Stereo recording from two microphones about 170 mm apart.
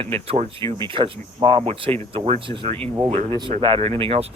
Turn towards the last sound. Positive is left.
turn(degrees=-35)  # may be behind; listen again after turning